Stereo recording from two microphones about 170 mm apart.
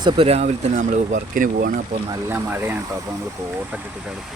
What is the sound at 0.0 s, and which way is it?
Speech, 35° right (ahead or behind).